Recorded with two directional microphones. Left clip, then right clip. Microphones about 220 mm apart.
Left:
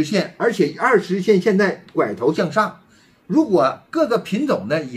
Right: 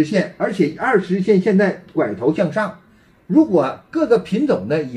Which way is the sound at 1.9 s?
30° left (ahead or behind).